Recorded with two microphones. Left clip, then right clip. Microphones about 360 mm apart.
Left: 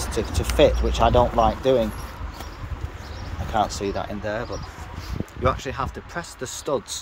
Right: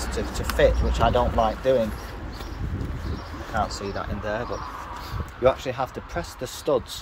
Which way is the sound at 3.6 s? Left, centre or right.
Centre.